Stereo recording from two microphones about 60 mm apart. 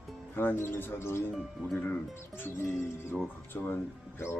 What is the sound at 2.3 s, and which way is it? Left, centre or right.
Speech, left.